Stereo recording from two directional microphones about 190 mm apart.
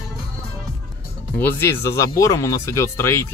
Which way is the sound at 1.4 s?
10° left (ahead or behind).